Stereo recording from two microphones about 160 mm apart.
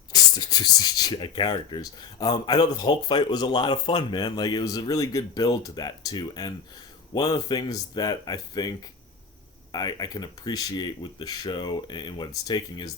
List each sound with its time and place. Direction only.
0.1 s speech: 25° left (ahead or behind)
9.7 s speech: 25° left (ahead or behind)